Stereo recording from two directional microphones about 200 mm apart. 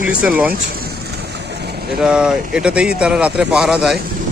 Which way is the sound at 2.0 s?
5° right (ahead or behind).